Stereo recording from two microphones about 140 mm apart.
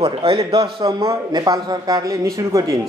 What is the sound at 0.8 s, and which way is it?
A man's voice, 25° right (ahead or behind).